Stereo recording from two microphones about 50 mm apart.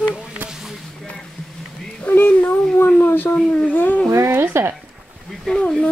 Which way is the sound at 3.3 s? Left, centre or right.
Left.